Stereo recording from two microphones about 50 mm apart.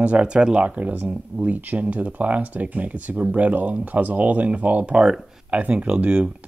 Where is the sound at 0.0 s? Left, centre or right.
Right.